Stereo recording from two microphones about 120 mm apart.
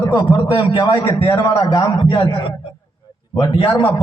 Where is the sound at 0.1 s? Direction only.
40° left (ahead or behind).